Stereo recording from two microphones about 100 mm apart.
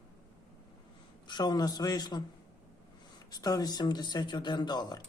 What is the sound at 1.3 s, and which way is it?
Speech, 45° left (ahead or behind).